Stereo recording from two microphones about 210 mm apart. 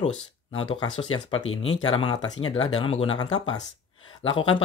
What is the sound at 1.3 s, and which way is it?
Speech, 70° left (ahead or behind).